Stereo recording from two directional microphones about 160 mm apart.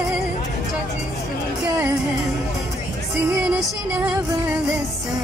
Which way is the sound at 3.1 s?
5° right (ahead or behind).